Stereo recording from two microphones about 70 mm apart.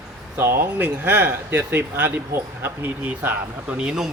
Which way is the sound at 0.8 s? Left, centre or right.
Right.